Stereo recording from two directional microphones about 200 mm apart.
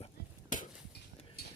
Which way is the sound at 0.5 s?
40° left (ahead or behind).